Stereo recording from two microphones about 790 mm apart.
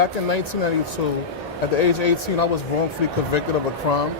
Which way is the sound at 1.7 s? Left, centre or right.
Left.